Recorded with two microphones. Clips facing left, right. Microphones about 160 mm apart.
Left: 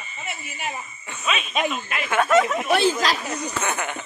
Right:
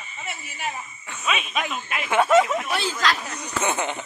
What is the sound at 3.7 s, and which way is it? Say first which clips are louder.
Speech: right 2 dB; 20° right (ahead or behind).